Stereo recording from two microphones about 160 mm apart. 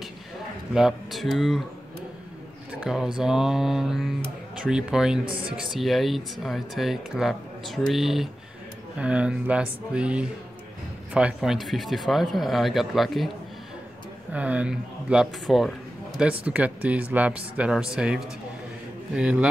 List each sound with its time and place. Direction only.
0.7 s speech: centre (ahead or behind)
2.7 s speech: 5° right (ahead or behind)
5.2 s speech: 35° right (ahead or behind)
5.6 s speech: centre (ahead or behind)
14.3 s speech: 10° right (ahead or behind)